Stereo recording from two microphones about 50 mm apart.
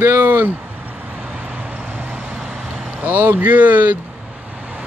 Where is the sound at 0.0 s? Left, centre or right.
Right.